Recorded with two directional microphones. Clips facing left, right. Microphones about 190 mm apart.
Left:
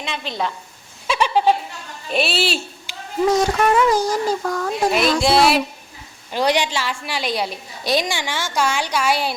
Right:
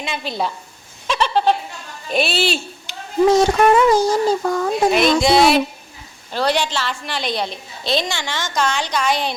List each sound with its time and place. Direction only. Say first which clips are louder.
0.0 s a woman's voice: right 2 dB; 5° right (ahead or behind)
1.0 s a sound: even; 10° left (ahead or behind)
2.0 s a woman's voice: right 1 dB; centre (ahead or behind)
3.3 s speech: right 2 dB; 25° right (ahead or behind)
4.9 s a woman's voice: right 2 dB; centre (ahead or behind)
6.3 s a woman's voice: even; 15° left (ahead or behind)